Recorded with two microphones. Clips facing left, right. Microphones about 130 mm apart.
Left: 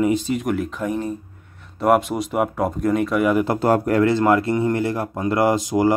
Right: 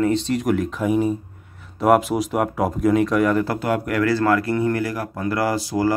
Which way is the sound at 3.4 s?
30° left (ahead or behind).